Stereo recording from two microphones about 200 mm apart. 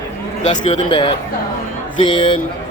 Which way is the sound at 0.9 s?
25° left (ahead or behind).